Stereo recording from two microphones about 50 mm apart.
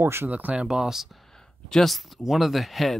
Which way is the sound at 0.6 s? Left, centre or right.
Centre.